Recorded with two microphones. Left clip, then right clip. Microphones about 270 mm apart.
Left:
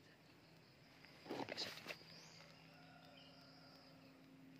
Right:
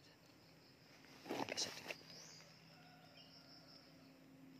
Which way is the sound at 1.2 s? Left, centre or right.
Right.